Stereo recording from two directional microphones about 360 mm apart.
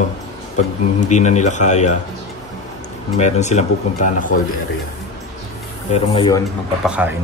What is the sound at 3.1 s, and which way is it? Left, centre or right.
A man's voice, centre.